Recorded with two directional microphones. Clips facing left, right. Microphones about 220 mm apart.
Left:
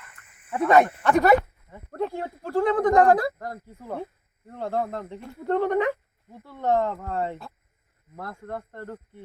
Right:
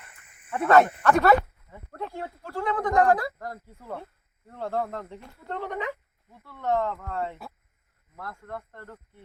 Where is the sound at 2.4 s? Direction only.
40° left (ahead or behind).